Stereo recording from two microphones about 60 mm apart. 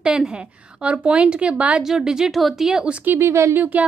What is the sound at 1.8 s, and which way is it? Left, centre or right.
A woman's voice, centre.